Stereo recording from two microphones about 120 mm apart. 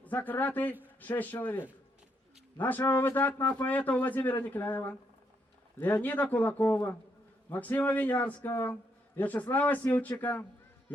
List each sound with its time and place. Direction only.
0.0 s a man's voice: 15° left (ahead or behind)